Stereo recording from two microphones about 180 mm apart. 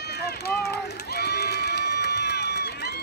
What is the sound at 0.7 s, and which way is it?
Crowd, 65° left (ahead or behind).